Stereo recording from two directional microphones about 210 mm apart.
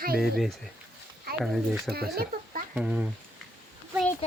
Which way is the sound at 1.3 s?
45° right (ahead or behind).